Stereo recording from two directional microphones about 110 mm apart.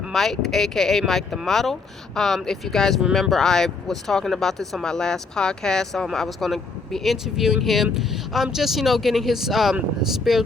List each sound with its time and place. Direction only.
0.1 s speech: centre (ahead or behind)